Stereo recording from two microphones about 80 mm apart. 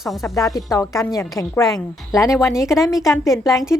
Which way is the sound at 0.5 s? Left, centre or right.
Left.